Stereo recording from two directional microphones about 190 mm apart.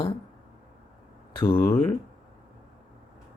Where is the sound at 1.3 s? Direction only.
25° left (ahead or behind).